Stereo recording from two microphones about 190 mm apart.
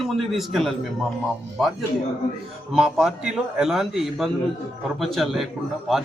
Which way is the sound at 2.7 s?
Centre (ahead or behind).